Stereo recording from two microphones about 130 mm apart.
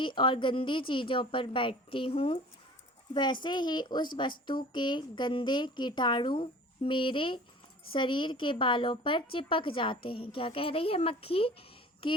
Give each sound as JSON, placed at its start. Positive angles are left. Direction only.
{"t": 0.0, "sound": "a woman's voice", "side_deg": 40}